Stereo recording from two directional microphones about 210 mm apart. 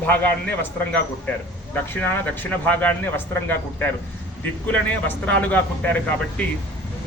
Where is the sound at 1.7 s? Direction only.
10° left (ahead or behind).